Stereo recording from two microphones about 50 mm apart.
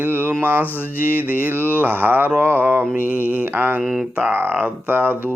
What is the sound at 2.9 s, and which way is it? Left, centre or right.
Mantra, right.